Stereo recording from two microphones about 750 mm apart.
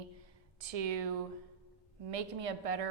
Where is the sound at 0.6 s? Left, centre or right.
Right.